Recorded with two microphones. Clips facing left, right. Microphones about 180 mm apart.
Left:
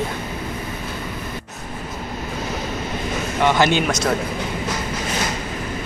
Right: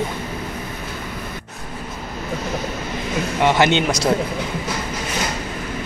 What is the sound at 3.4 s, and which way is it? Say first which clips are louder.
Speech: right 1 dB; 20° right (ahead or behind).